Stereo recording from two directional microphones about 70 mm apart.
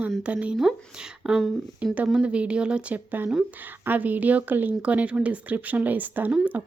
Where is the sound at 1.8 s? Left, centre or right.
Centre.